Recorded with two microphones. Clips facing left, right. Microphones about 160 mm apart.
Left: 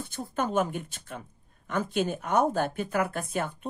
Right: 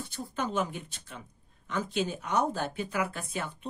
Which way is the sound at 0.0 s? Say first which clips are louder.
Left 3 dB; 50° left (ahead or behind).